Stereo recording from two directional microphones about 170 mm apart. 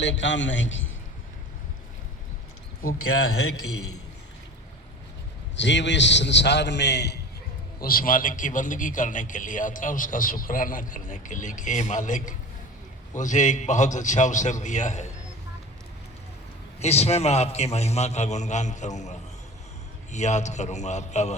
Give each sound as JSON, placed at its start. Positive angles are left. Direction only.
{"t": 0.0, "sound": "a man's voice", "side_deg": 90}
{"t": 5.5, "sound": "a man's voice", "side_deg": 90}
{"t": 7.8, "sound": "a man's voice", "side_deg": 60}
{"t": 16.8, "sound": "a man's voice", "side_deg": 40}